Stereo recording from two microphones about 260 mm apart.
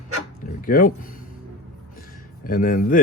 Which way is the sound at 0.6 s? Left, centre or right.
Left.